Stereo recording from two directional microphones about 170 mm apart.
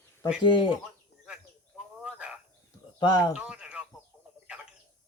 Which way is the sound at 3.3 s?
5° right (ahead or behind).